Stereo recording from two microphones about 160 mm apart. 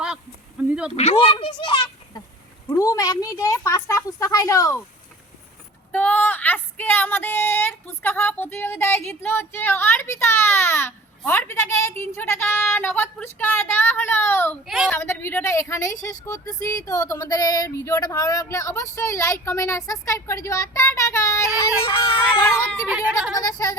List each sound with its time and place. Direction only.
0.6 s a sound: 10° right (ahead or behind)
0.9 s speech: 40° left (ahead or behind); by 4.8 s 20° left (ahead or behind)
5.9 s speech: 10° left (ahead or behind)
14.6 s a woman's voice: centre (ahead or behind)
14.8 s speech: 15° left (ahead or behind)
22.9 s speech: 5° right (ahead or behind)
23.6 s speech: 20° left (ahead or behind)